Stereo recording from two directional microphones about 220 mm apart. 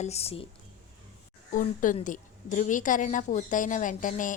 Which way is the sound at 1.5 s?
35° left (ahead or behind).